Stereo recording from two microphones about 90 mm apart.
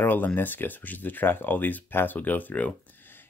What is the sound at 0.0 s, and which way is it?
Speech, 20° left (ahead or behind).